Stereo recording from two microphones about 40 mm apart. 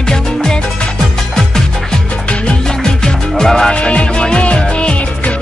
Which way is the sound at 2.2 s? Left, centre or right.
Left.